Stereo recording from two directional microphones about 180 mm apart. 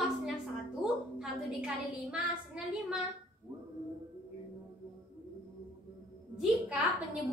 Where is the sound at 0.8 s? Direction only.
5° right (ahead or behind).